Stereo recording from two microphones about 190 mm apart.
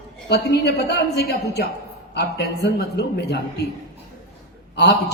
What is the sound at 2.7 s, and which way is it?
Speech, 60° left (ahead or behind).